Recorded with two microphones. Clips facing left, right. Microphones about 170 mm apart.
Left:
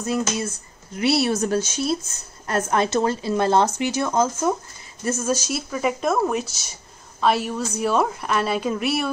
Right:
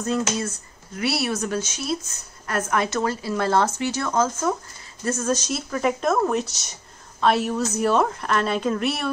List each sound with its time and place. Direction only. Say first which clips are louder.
0.0 s speech: even; 10° left (ahead or behind)
0.9 s a woman's voice: left 4 dB; 25° left (ahead or behind); by 9.1 s 5° left (ahead or behind)